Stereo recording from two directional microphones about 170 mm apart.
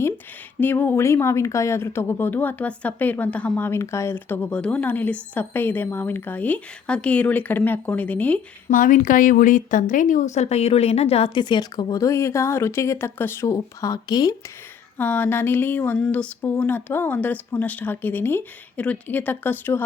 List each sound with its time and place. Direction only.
0.6 s speech: 10° left (ahead or behind)
8.7 s a woman's voice: 50° left (ahead or behind); by 14.3 s 20° left (ahead or behind)
14.9 s speech: 10° left (ahead or behind)